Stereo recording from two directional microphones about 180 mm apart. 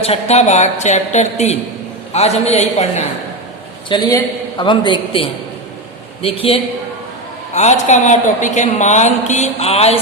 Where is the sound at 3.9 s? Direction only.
20° left (ahead or behind).